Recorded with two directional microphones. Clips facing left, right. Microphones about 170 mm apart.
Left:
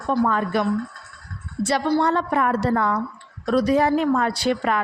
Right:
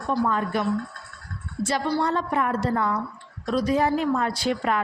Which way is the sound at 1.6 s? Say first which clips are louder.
Left 4 dB; 70° left (ahead or behind).